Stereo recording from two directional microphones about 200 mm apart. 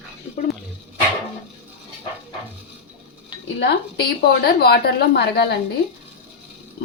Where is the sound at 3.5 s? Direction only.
50° left (ahead or behind).